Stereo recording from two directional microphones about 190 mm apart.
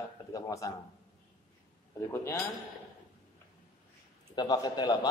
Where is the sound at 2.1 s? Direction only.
15° left (ahead or behind).